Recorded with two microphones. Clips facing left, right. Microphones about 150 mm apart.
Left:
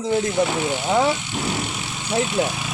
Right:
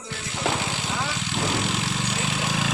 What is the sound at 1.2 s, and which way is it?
Vehicle, 90° right.